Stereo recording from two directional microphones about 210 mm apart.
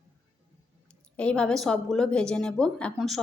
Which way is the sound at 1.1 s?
5° left (ahead or behind).